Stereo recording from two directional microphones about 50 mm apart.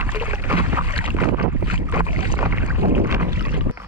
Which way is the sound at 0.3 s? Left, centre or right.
Right.